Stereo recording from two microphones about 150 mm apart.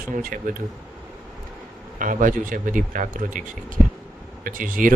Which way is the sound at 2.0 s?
60° right (ahead or behind).